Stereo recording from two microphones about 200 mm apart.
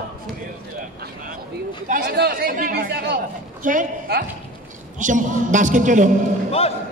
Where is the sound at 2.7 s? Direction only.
55° right (ahead or behind); by 6.1 s 40° right (ahead or behind).